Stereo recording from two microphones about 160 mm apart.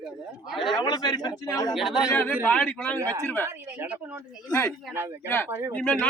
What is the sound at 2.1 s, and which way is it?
Speech, 10° left (ahead or behind).